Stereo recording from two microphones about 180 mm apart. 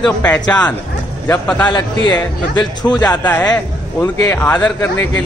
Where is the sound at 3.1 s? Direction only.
10° left (ahead or behind).